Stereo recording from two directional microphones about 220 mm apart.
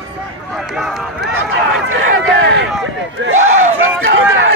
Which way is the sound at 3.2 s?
55° right (ahead or behind).